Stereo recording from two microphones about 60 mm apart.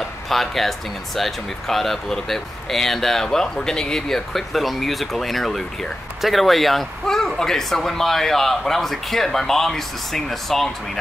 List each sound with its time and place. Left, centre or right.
0.3 s speech: centre